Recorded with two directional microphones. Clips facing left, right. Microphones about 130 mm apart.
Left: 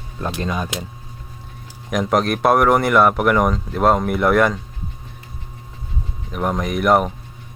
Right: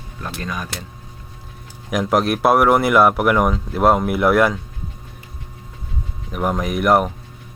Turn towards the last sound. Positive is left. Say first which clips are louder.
# even
turn(degrees=0)  # may be behind; listen again after turning